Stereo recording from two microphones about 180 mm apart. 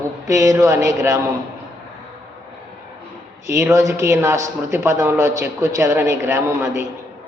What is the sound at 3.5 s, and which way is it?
A man's voice, 15° right (ahead or behind).